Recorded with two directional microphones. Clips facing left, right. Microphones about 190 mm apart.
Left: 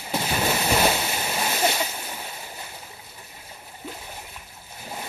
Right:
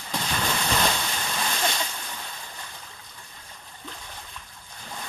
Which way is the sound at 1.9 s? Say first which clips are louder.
Left 3 dB; 25° left (ahead or behind).